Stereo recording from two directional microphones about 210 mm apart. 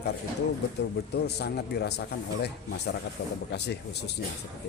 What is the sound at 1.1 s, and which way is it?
Speech, 50° left (ahead or behind).